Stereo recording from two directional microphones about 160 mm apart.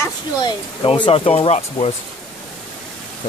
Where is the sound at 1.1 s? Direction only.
40° left (ahead or behind).